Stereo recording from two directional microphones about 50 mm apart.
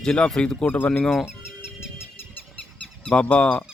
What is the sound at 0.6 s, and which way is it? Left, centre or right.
Speech, left.